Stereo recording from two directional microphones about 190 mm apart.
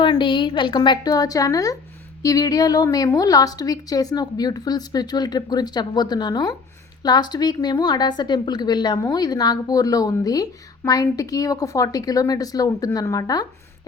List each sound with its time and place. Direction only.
0.0 s a woman's voice: 25° left (ahead or behind)